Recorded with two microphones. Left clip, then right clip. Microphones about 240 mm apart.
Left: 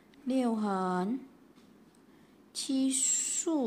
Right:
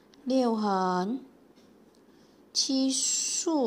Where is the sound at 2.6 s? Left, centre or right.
Centre.